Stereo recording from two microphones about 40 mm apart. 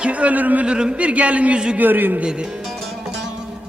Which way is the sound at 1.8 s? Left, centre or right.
Right.